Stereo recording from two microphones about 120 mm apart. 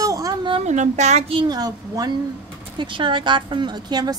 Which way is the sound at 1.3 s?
40° right (ahead or behind).